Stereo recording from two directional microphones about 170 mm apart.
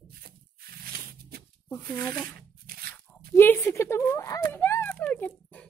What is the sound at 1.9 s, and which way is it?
Speech, 15° left (ahead or behind).